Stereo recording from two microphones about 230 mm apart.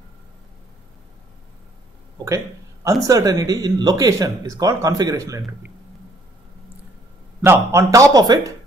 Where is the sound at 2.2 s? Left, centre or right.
Centre.